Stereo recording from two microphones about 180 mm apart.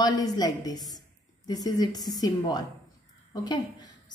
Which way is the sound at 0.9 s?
20° left (ahead or behind).